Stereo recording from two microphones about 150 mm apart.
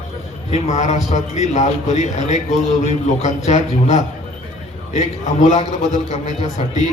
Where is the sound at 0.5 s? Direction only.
50° left (ahead or behind).